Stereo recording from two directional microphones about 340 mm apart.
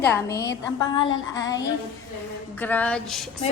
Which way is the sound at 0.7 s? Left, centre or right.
Centre.